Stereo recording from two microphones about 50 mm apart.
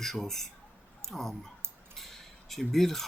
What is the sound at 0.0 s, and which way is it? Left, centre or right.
Speech, centre.